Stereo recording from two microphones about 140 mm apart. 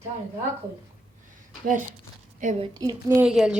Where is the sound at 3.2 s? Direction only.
5° right (ahead or behind).